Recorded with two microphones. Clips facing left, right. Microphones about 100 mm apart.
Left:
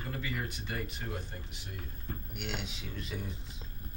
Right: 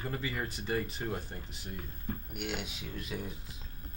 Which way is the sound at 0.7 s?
35° right (ahead or behind).